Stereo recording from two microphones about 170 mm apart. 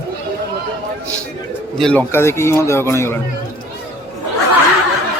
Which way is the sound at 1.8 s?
10° left (ahead or behind).